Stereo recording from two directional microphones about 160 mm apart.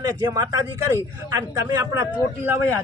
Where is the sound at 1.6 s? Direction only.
20° right (ahead or behind).